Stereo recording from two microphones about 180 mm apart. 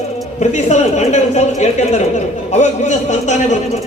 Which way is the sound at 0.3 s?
40° left (ahead or behind).